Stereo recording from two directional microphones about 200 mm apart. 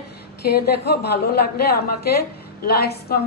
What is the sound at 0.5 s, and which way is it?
A woman's voice, 50° left (ahead or behind).